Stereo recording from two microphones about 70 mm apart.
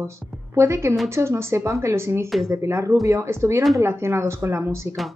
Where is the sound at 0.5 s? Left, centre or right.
Right.